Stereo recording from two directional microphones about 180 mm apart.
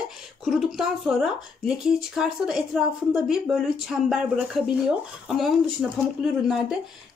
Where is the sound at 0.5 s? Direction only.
Centre (ahead or behind).